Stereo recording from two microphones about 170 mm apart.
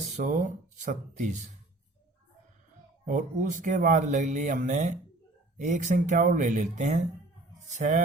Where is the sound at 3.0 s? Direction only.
50° right (ahead or behind).